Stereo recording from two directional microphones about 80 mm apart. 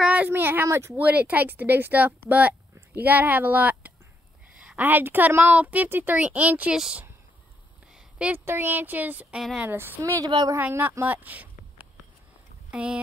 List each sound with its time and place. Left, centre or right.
0.0 s a sound: centre
0.3 s a woman's voice: right
0.9 s a woman's voice: right
7.9 s a sound: centre
8.5 s a woman's voice: right
10.0 s a woman's voice: right
10.6 s a woman's voice: right
12.7 s speech: centre